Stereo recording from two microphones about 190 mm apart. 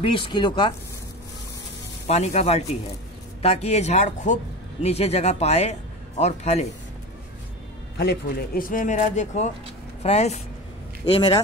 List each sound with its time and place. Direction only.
0.0 s speech: 25° left (ahead or behind)
2.0 s speech: 35° left (ahead or behind)
8.0 s speech: 55° left (ahead or behind); by 10.4 s 35° left (ahead or behind)
11.1 s speech: 25° left (ahead or behind)